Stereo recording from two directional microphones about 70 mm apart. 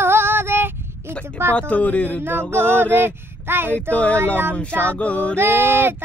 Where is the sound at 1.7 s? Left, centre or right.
Left.